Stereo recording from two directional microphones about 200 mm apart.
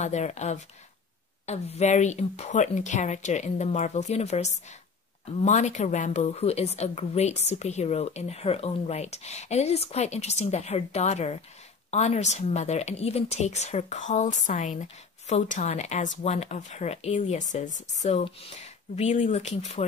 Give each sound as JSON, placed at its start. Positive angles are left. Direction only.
{"t": 0.0, "sound": "speech", "side_deg": 35}